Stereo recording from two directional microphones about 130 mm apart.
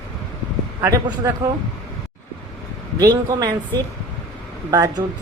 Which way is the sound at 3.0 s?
30° right (ahead or behind).